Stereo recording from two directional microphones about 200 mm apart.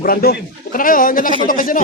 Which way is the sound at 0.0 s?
50° left (ahead or behind).